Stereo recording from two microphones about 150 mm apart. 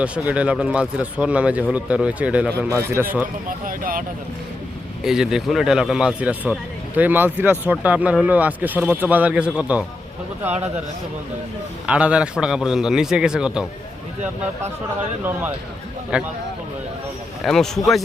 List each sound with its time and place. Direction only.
0.0 s speech: 10° right (ahead or behind)
3.7 s speech: 70° right (ahead or behind)
5.0 s a man's voice: 5° right (ahead or behind)
11.9 s a man's voice: 10° right (ahead or behind)
16.1 s speech: 5° right (ahead or behind)
17.4 s a man's voice: centre (ahead or behind)